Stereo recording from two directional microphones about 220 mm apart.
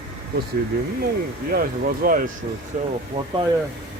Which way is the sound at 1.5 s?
40° right (ahead or behind).